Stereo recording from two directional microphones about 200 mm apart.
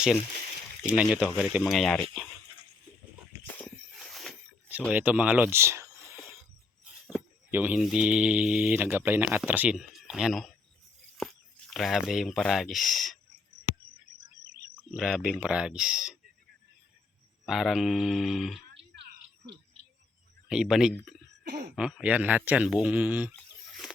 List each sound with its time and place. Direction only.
0.9 s speech: 5° right (ahead or behind)
3.4 s a sound: 5° left (ahead or behind)
4.9 s speech: 5° right (ahead or behind)
14.8 s speech: centre (ahead or behind)
17.4 s speech: centre (ahead or behind)
20.5 s speech: 5° right (ahead or behind)
21.4 s speech: 50° right (ahead or behind)
21.8 s speech: 5° right (ahead or behind)
23.3 s a sound: centre (ahead or behind)